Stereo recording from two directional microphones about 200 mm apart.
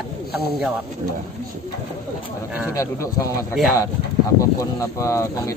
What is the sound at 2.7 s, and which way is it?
Speech, 15° left (ahead or behind).